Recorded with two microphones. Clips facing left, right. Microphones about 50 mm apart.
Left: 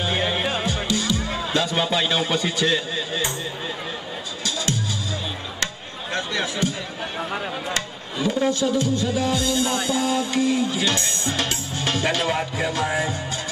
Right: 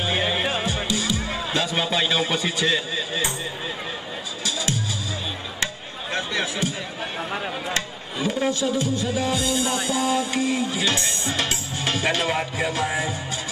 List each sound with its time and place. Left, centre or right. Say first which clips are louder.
0.0 s music: even; centre
0.8 s music: left 1 dB; centre
1.5 s a man's voice: left 2 dB; centre
4.5 s music: left 1 dB; right
6.1 s a sound: left 1 dB; centre
7.2 s speech: left 1 dB; centre
7.7 s speech: even; centre
8.9 s music: left 2 dB; right
12.8 s speech: left 1 dB; centre